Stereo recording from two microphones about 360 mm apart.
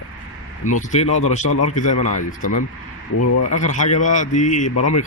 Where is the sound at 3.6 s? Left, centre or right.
Centre.